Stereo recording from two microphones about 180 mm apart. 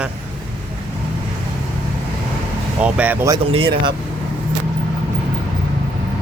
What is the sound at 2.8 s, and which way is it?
Speech, 5° right (ahead or behind).